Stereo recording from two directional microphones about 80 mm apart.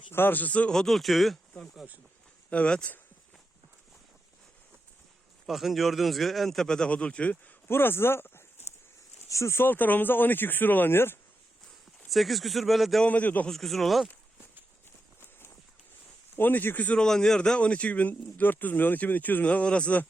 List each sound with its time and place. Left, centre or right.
0.1 s a man's voice: left; by 1.9 s centre
2.5 s speech: centre
5.5 s a man's voice: centre
7.7 s speech: left
12.1 s a man's voice: centre
13.1 s speech: centre
13.5 s a man's voice: centre
15.2 s run: left
16.3 s speech: left
17.0 s speech: centre